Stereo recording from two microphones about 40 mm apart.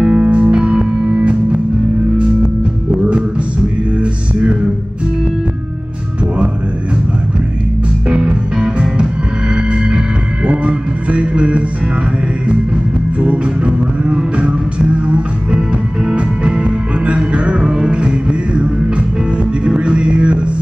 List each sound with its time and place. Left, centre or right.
0.0 s music: right
4.0 s music: right
8.1 s music: right
13.2 s music: right